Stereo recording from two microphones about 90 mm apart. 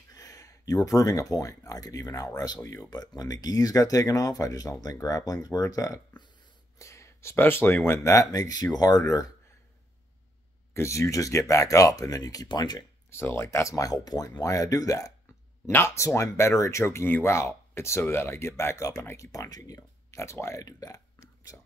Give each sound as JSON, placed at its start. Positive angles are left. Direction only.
{"t": 0.1, "sound": "speech", "side_deg": 40}
{"t": 10.7, "sound": "speech", "side_deg": 30}
{"t": 13.1, "sound": "speech", "side_deg": 30}
{"t": 15.6, "sound": "speech", "side_deg": 30}
{"t": 20.6, "sound": "burping", "side_deg": 40}